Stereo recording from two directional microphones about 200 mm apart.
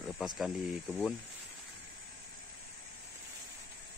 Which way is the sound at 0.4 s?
Centre (ahead or behind).